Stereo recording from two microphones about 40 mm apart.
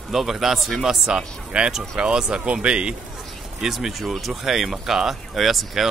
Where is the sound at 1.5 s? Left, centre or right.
Right.